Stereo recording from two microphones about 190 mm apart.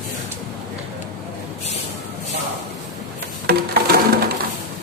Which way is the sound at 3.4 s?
55° right (ahead or behind).